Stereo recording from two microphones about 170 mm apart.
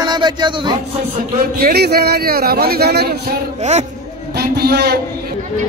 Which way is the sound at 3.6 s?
40° right (ahead or behind).